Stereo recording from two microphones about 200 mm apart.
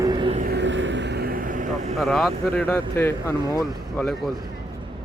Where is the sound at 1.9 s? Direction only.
Centre (ahead or behind).